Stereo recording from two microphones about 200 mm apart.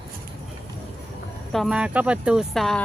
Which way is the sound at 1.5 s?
Centre (ahead or behind).